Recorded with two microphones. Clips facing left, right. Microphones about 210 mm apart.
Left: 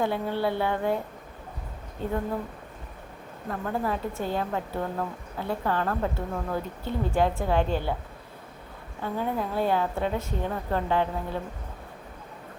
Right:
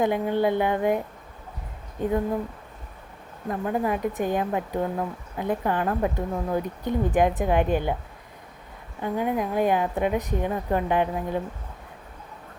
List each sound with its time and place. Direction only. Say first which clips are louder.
0.0 s a woman's voice: right 4 dB; 15° right (ahead or behind)
3.5 s a woman's voice: right 4 dB; 15° right (ahead or behind)
9.0 s a woman's voice: right 4 dB; 15° right (ahead or behind)